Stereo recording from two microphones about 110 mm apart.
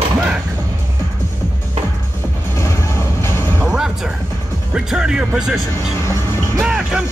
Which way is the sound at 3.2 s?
25° left (ahead or behind).